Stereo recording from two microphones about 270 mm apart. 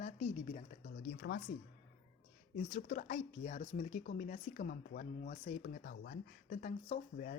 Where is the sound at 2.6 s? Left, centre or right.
Left.